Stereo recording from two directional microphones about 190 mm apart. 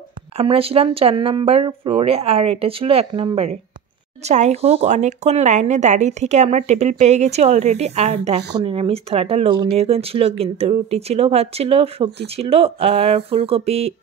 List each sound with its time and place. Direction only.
0.4 s speech: 30° right (ahead or behind)